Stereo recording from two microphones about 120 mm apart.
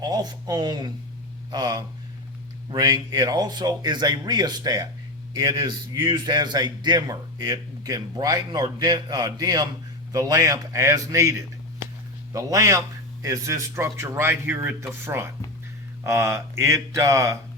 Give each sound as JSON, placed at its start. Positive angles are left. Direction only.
{"t": 0.0, "sound": "a man's voice", "side_deg": -35}